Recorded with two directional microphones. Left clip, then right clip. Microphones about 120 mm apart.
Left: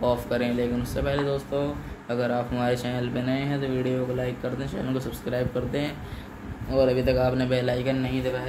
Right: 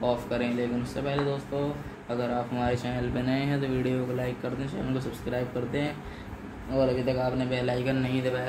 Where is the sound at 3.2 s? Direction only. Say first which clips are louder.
Even; 10° left (ahead or behind).